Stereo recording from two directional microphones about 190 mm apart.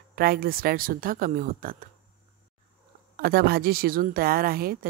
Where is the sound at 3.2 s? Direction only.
55° right (ahead or behind).